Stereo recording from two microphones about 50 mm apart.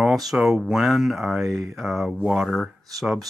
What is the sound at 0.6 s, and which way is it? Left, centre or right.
Speech, centre.